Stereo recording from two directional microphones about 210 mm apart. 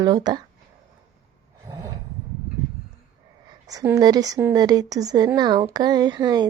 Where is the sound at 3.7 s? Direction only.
15° right (ahead or behind).